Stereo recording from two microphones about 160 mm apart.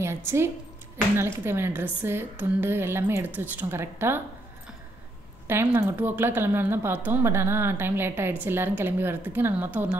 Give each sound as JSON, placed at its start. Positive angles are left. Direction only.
{"t": 0.0, "sound": "a woman's voice", "side_deg": -15}
{"t": 5.5, "sound": "a woman's voice", "side_deg": -15}